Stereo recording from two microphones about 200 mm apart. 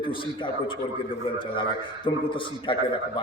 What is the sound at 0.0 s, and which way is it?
A man's voice, 25° left (ahead or behind).